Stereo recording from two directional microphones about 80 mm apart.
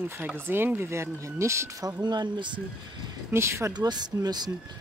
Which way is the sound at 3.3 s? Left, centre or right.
Right.